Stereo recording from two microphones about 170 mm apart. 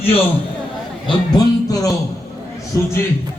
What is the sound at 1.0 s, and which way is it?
Speech, 20° left (ahead or behind).